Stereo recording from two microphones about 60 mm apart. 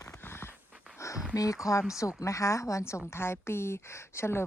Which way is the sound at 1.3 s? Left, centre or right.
Left.